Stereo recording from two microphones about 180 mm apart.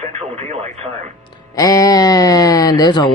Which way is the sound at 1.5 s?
20° left (ahead or behind).